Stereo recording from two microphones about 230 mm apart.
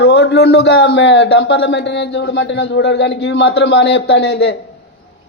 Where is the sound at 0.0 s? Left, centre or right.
Left.